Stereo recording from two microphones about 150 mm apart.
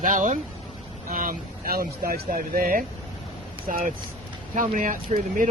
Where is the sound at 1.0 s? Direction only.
70° right (ahead or behind).